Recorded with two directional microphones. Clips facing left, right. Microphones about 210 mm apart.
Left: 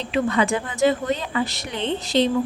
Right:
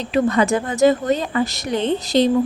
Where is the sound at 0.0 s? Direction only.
45° right (ahead or behind).